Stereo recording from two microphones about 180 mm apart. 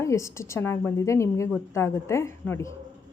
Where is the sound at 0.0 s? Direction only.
15° left (ahead or behind).